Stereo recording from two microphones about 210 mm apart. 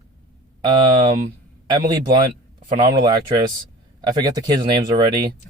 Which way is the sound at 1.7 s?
20° right (ahead or behind).